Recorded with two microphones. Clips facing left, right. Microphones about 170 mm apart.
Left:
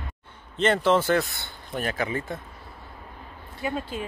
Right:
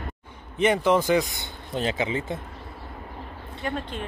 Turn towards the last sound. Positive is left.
turn(degrees=5)  # may be behind; listen again after turning